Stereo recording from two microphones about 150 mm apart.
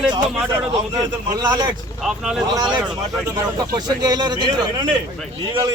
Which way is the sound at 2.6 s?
30° right (ahead or behind).